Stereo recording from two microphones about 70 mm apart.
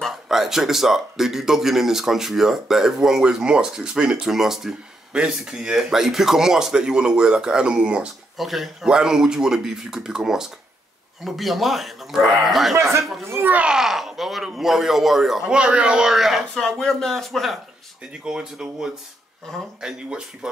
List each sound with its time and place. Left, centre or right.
0.0 s speech: centre
8.4 s speech: centre
13.2 s a child's voice: right
13.7 s speech: centre
15.4 s speech: centre
18.2 s speech: centre